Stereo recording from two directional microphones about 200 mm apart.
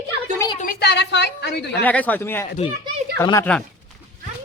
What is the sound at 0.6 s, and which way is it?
A woman's voice, 50° left (ahead or behind).